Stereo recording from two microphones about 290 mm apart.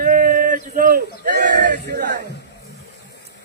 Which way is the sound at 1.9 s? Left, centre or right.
Right.